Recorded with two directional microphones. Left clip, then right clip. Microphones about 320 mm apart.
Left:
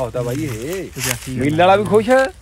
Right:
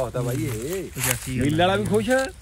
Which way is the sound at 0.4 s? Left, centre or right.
Centre.